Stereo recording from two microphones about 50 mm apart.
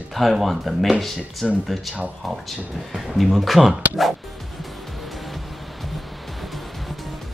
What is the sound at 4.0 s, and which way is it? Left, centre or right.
Music, centre.